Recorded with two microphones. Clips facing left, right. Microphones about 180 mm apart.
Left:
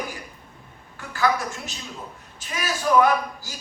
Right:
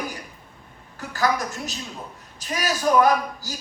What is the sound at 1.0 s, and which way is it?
A woman's voice, 40° right (ahead or behind).